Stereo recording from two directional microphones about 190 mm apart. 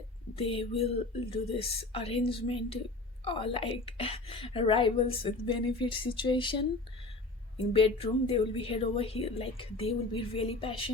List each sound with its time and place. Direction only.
0.3 s a woman's voice: 30° left (ahead or behind)
7.7 s a woman's voice: 30° left (ahead or behind)